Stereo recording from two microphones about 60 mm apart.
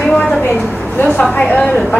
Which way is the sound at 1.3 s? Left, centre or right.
Left.